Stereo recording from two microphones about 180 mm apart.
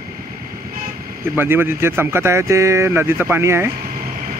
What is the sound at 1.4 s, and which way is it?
Speech, 10° right (ahead or behind).